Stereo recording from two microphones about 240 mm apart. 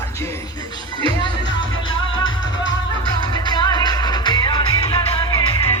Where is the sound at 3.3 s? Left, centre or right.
Centre.